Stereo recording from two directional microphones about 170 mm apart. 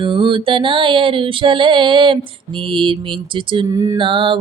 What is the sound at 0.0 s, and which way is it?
Female singing, 30° right (ahead or behind).